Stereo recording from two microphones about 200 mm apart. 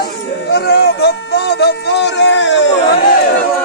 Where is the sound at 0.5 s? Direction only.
55° left (ahead or behind).